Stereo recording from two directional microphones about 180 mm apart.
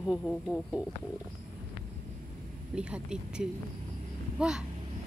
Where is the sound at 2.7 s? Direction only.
5° right (ahead or behind).